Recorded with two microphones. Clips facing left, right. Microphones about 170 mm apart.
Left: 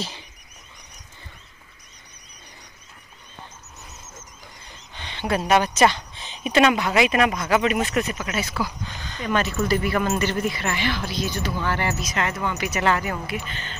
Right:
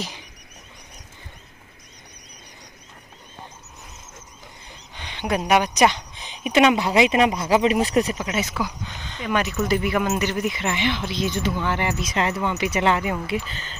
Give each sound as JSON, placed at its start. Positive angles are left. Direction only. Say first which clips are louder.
{"t": 4.9, "sound": "speech", "louder": "even", "side_deg": -10}